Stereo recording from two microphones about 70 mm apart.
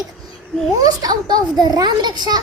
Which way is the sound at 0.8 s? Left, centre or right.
Right.